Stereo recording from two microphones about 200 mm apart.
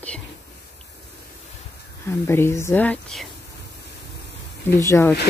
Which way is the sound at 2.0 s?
15° left (ahead or behind).